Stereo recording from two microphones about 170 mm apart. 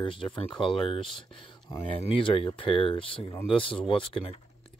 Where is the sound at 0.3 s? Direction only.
5° left (ahead or behind).